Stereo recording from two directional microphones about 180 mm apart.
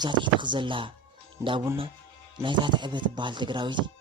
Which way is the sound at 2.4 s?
25° right (ahead or behind).